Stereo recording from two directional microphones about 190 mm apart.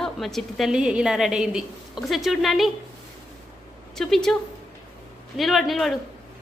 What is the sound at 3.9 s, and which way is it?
Speech, centre (ahead or behind).